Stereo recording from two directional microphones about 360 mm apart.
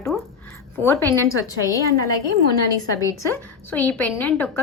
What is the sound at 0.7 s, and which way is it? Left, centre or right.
Speech, centre.